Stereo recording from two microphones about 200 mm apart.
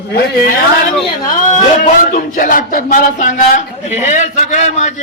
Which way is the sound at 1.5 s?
40° left (ahead or behind).